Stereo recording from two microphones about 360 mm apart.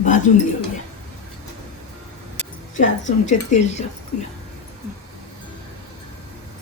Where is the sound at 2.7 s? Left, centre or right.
Centre.